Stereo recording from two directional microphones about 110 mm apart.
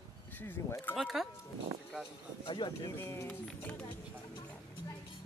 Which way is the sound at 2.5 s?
45° left (ahead or behind).